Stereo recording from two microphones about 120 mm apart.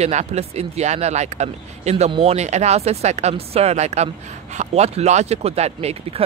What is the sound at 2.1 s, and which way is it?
Speech, 55° right (ahead or behind).